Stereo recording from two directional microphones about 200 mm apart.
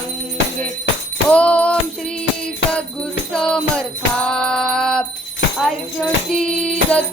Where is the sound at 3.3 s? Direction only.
5° left (ahead or behind).